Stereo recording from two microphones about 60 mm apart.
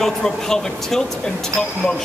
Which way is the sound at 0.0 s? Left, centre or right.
Centre.